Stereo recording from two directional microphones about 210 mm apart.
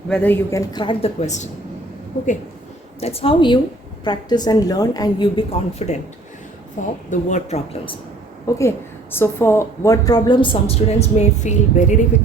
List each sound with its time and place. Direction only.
0.1 s a woman's voice: 10° left (ahead or behind)
0.7 s a woman's voice: 25° left (ahead or behind)
3.0 s a woman's voice: 30° left (ahead or behind)
8.4 s a woman's voice: 15° left (ahead or behind); by 11.9 s 35° left (ahead or behind)